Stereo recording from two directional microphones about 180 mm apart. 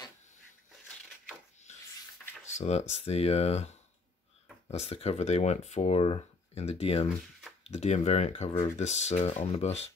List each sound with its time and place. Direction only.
2.5 s speech: 40° left (ahead or behind)